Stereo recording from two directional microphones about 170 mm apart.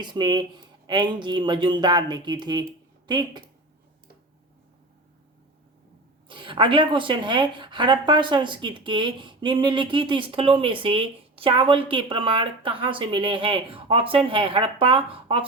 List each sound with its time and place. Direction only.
0.0 s speech: 25° right (ahead or behind)
6.2 s speech: 30° right (ahead or behind)